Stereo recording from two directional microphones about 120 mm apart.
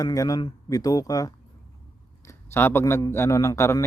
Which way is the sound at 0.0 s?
30° left (ahead or behind).